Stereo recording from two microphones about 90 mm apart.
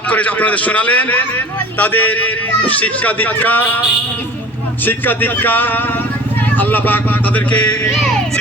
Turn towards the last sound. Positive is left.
turn(degrees=15)  # may be behind; listen again after turning